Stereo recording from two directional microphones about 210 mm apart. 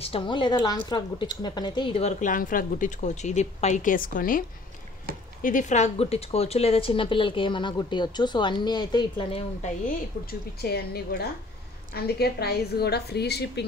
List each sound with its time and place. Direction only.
0.0 s a woman's voice: 25° left (ahead or behind)
10.6 s a woman's voice: 50° left (ahead or behind)